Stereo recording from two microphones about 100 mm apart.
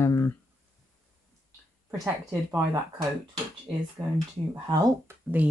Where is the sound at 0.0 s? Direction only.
30° left (ahead or behind).